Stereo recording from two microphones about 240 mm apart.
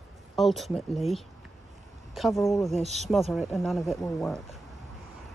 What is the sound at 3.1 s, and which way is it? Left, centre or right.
Speech, centre.